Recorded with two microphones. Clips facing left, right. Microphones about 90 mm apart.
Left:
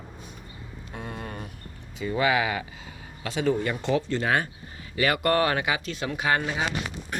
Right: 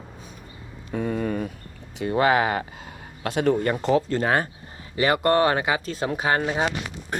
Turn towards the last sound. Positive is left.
turn(degrees=-35)  # may be behind; listen again after turning